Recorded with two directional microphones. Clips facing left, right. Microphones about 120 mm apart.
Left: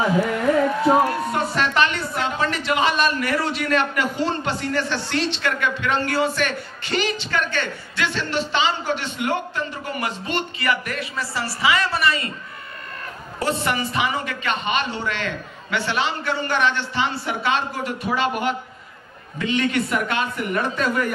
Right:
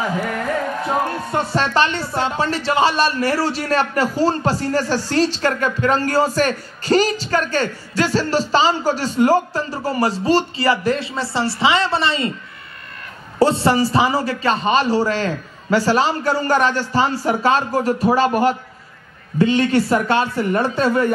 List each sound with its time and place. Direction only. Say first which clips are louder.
1.3 s a woman's voice: right 3 dB; 30° right (ahead or behind)
13.4 s a woman's voice: right 8 dB; 30° right (ahead or behind)